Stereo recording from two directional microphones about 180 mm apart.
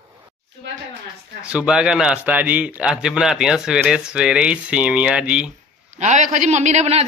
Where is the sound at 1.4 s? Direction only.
5° right (ahead or behind).